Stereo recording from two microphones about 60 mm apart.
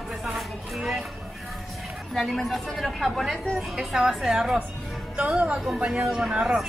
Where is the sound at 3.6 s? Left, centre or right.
Centre.